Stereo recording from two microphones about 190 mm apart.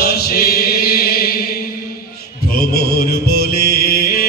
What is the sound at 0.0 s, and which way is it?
Chant, 55° left (ahead or behind).